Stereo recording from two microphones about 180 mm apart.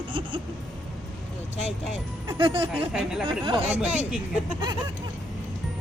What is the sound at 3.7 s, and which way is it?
Speech, 10° right (ahead or behind).